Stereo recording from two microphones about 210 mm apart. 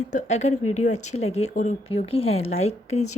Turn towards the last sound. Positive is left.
turn(degrees=30)  # may be behind; listen again after turning